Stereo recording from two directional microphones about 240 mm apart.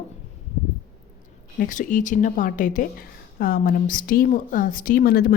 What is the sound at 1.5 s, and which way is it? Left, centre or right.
A woman's voice, left.